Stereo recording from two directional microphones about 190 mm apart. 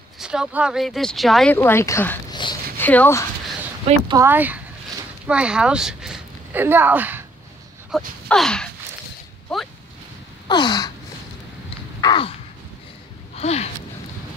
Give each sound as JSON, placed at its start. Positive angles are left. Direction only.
{"t": 0.2, "sound": "speech", "side_deg": -5}
{"t": 4.1, "sound": "speech", "side_deg": -15}
{"t": 10.5, "sound": "gasp", "side_deg": 20}
{"t": 12.0, "sound": "crow", "side_deg": 25}
{"t": 13.4, "sound": "a sound", "side_deg": 35}